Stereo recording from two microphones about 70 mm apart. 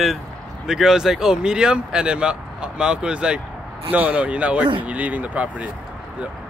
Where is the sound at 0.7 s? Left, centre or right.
Centre.